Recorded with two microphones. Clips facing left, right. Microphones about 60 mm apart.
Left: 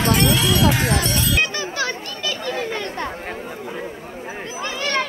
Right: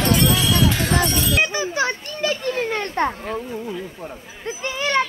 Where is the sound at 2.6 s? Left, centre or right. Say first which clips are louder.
Right 4 dB; right.